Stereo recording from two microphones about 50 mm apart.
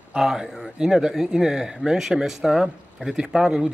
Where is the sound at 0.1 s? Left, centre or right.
Centre.